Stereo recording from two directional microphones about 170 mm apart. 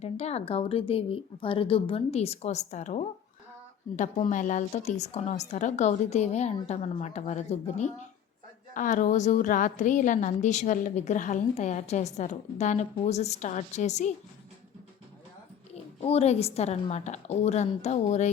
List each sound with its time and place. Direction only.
0.0 s a woman's voice: 40° left (ahead or behind)
16.0 s speech: 40° left (ahead or behind)